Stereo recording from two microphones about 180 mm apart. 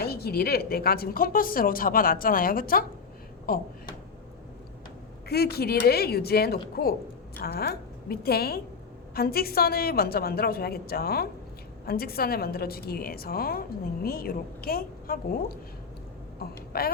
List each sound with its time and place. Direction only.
0.0 s a woman's voice: 60° left (ahead or behind)
5.3 s a woman's voice: 60° left (ahead or behind)